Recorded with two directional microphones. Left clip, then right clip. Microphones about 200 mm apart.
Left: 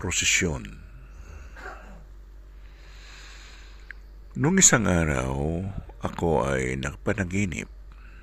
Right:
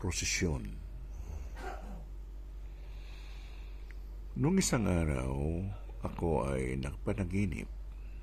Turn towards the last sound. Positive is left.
turn(degrees=15)  # may be behind; listen again after turning